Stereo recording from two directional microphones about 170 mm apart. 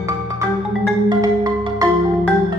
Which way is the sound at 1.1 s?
25° right (ahead or behind).